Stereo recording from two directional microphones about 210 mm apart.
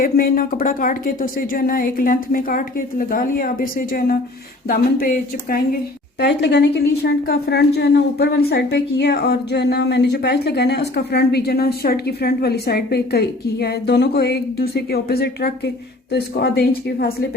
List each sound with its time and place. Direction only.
0.0 s a woman's voice: 45° left (ahead or behind)